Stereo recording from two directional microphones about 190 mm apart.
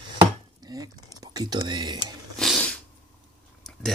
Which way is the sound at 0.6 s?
20° right (ahead or behind).